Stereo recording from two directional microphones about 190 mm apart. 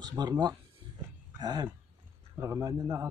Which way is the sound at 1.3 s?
20° right (ahead or behind).